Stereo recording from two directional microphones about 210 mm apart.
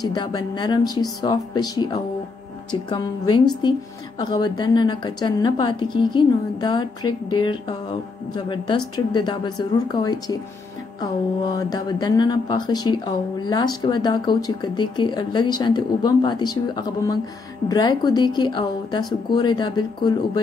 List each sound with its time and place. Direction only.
0.0 s speech: 20° left (ahead or behind)